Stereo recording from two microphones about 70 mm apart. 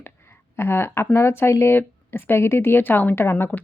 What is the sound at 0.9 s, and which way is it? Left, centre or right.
Speech, left.